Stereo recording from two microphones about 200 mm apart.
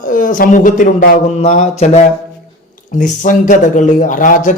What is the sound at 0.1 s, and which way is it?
A man's voice, 40° left (ahead or behind).